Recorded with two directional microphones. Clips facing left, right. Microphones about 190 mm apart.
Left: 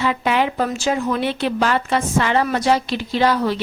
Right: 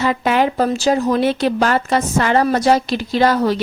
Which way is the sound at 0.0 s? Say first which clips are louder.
Right 3 dB; 45° right (ahead or behind).